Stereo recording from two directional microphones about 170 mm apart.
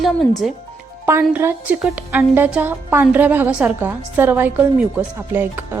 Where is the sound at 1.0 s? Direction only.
15° right (ahead or behind).